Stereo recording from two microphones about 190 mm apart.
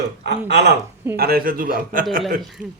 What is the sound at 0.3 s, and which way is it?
Speech, 65° right (ahead or behind).